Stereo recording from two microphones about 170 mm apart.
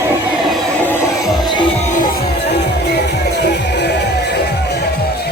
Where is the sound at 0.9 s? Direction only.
20° left (ahead or behind).